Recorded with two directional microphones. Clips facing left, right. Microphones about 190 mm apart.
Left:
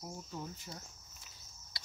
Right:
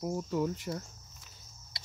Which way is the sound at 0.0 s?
85° right.